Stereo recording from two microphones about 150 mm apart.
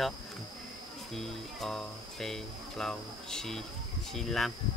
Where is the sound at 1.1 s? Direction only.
Centre (ahead or behind).